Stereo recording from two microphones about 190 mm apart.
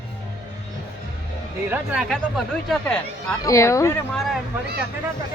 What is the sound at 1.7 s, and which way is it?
Speech, 5° right (ahead or behind).